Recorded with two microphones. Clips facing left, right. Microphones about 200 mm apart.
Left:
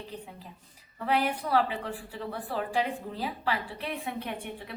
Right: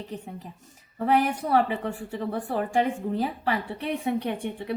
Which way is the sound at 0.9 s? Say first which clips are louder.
Right 5 dB; 50° right (ahead or behind).